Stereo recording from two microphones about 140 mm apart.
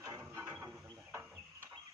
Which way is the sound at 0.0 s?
25° right (ahead or behind).